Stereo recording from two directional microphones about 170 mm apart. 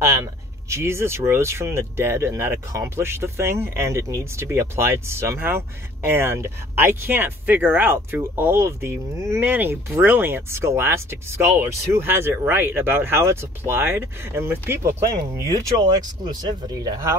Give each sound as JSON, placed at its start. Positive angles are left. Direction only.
{"t": 0.0, "sound": "speech", "side_deg": -15}